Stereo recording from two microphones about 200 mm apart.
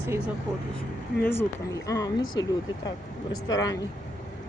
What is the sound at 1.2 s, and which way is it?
Speech, 10° left (ahead or behind).